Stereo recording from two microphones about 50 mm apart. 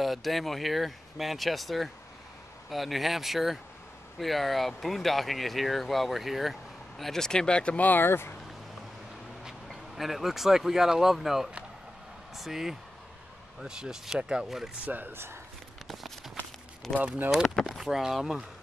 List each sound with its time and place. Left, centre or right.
0.0 s speech: centre; by 8.0 s left
8.0 s speech: left
9.7 s speech: centre
14.9 s speech: right
16.9 s speech: centre
17.6 s speech: centre